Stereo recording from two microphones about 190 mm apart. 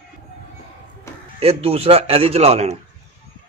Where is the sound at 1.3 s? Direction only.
30° right (ahead or behind).